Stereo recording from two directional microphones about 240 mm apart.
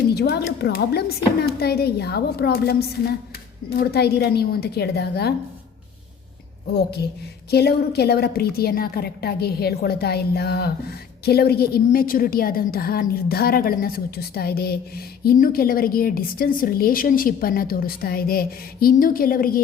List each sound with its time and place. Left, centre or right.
0.1 s a woman's voice: left
7.5 s a woman's voice: left